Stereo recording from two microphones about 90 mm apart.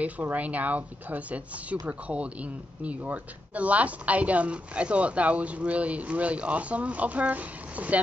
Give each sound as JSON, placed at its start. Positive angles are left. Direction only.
{"t": 0.0, "sound": "speech", "side_deg": -15}